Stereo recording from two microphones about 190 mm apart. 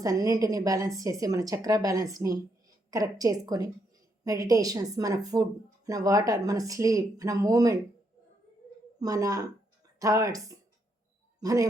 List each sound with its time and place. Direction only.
0.0 s speech: 20° right (ahead or behind)
9.0 s speech: 20° right (ahead or behind)